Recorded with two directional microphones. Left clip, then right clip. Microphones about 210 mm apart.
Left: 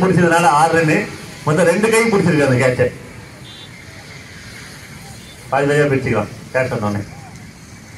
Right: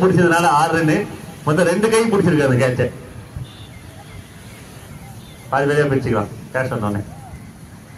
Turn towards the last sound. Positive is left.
turn(degrees=40)  # may be behind; listen again after turning